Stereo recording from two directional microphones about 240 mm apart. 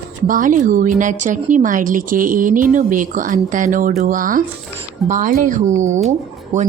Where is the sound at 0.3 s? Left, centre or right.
Right.